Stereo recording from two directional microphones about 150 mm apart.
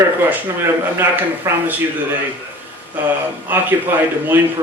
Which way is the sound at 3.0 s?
10° right (ahead or behind).